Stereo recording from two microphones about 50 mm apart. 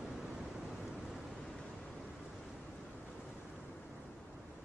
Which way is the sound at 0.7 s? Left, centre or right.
Centre.